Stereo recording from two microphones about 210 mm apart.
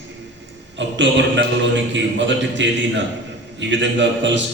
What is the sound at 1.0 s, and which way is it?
A man's voice, 60° right (ahead or behind).